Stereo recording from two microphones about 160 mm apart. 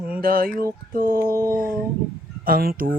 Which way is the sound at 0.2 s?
65° right (ahead or behind).